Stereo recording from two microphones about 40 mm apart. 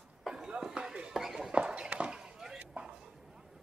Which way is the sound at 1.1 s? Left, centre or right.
Centre.